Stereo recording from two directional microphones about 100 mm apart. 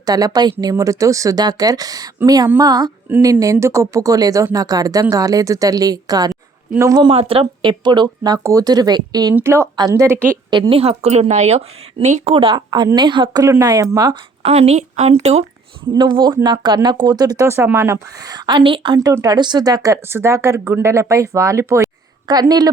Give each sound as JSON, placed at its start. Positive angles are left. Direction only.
{"t": 0.0, "sound": "speech", "side_deg": -40}
{"t": 3.4, "sound": "speech", "side_deg": -30}
{"t": 7.1, "sound": "speech", "side_deg": -70}
{"t": 9.3, "sound": "a woman's voice", "side_deg": -25}
{"t": 10.7, "sound": "speech", "side_deg": -75}
{"t": 12.5, "sound": "speech", "side_deg": -45}
{"t": 14.4, "sound": "a woman's voice", "side_deg": -90}
{"t": 15.9, "sound": "speech", "side_deg": -50}
{"t": 19.2, "sound": "speech", "side_deg": -45}
{"t": 22.3, "sound": "speech", "side_deg": -40}